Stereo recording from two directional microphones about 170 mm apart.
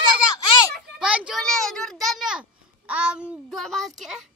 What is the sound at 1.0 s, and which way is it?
A child's voice, 5° right (ahead or behind).